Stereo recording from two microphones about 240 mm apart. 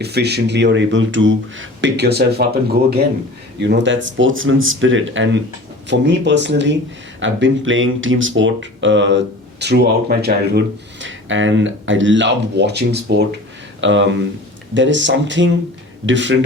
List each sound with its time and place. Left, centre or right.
0.0 s speech: right